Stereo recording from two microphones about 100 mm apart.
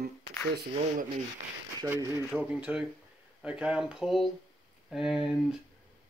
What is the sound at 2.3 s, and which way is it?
Speech, 10° right (ahead or behind).